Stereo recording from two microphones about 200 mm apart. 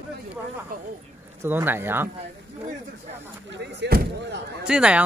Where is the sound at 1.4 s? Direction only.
10° right (ahead or behind).